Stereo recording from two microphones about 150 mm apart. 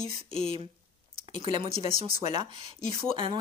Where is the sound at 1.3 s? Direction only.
35° right (ahead or behind).